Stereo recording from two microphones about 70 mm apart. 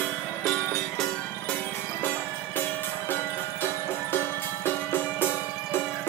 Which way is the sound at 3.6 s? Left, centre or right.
Left.